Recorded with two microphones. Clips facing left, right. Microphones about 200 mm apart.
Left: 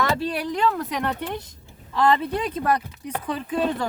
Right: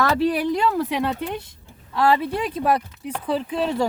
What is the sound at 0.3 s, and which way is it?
Speech, 10° right (ahead or behind).